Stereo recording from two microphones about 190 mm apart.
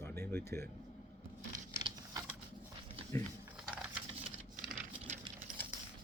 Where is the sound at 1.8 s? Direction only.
25° right (ahead or behind).